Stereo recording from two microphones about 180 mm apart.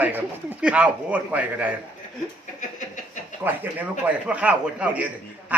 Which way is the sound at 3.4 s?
10° right (ahead or behind).